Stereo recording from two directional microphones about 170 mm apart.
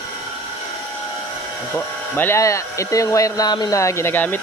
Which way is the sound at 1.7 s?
10° left (ahead or behind).